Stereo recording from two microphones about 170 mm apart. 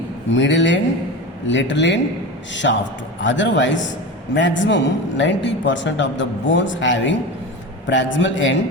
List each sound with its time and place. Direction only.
0.3 s a man's voice: 90° left